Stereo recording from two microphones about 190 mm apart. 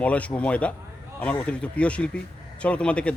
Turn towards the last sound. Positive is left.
turn(degrees=5)  # may be behind; listen again after turning